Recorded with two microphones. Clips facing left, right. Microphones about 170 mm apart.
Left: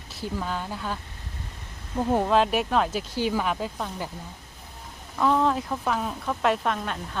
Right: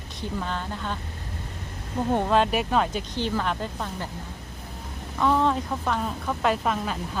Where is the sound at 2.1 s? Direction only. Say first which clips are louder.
Even; centre (ahead or behind).